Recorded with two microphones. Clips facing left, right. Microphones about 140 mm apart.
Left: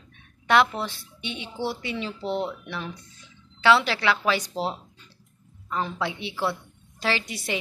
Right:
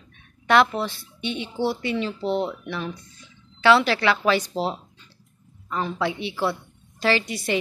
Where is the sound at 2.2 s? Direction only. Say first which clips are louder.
Right 2 dB; 20° right (ahead or behind).